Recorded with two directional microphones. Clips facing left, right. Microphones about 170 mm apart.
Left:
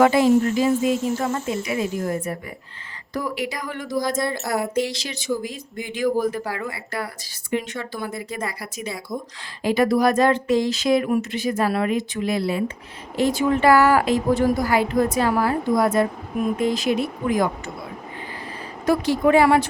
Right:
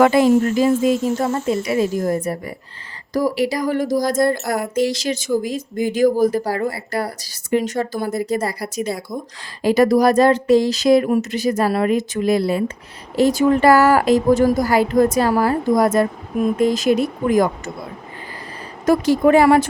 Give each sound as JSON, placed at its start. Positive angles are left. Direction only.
{"t": 0.0, "sound": "speech", "side_deg": -50}
{"t": 1.2, "sound": "speech", "side_deg": -35}
{"t": 4.4, "sound": "speech", "side_deg": 5}
{"t": 4.7, "sound": "speech", "side_deg": -45}
{"t": 18.9, "sound": "speech", "side_deg": -45}